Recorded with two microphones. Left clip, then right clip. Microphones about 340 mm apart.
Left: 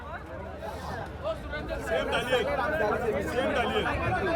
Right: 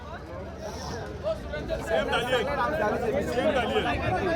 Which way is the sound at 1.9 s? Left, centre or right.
Centre.